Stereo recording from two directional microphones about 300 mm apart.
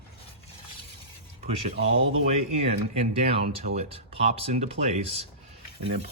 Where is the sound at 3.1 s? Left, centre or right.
Right.